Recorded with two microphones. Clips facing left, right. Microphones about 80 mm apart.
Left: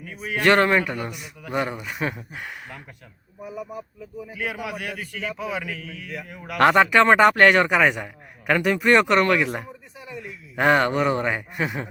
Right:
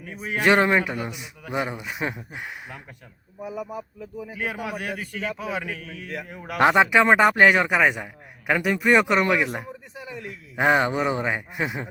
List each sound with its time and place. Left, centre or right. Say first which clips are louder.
0.2 s a man's voice: left 1 dB; centre
3.4 s speech: right 2 dB; right
3.7 s a man's voice: right 1 dB; centre
4.3 s a man's voice: even; right
6.6 s a man's voice: left 1 dB; centre
10.0 s speech: even; right
10.5 s a man's voice: left 1 dB; centre